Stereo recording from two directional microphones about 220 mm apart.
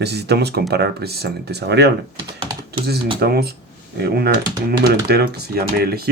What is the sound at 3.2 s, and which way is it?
Speech, 45° right (ahead or behind).